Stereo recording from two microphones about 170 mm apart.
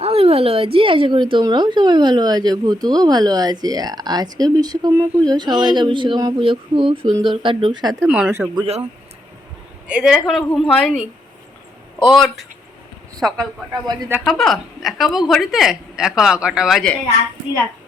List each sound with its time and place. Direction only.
0.0 s a woman's voice: 35° right (ahead or behind)
8.0 s speech: 5° right (ahead or behind)
8.5 s speech: 35° right (ahead or behind)
9.8 s speech: 5° right (ahead or behind)
13.8 s a woman's voice: 25° right (ahead or behind)
14.3 s speech: centre (ahead or behind)